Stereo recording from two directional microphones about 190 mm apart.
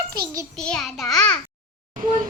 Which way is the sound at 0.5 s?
5° left (ahead or behind).